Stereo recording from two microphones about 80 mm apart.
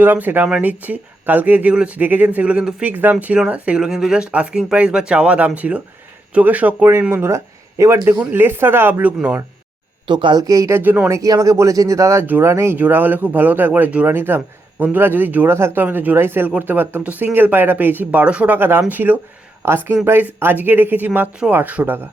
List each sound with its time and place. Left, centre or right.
0.0 s speech: right
2.9 s speech: right
7.1 s speech: right
8.3 s speech: right
10.1 s speech: right
10.4 s speech: right
10.8 s speech: right
11.1 s speech: right
12.2 s speech: right
12.7 s speech: right